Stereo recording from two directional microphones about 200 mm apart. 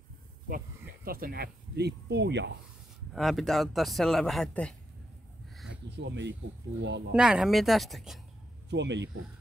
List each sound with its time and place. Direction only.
1.0 s speech: 45° right (ahead or behind)
3.1 s speech: centre (ahead or behind)
5.7 s speech: 60° right (ahead or behind)
7.1 s speech: 5° right (ahead or behind)
8.6 s speech: 60° right (ahead or behind)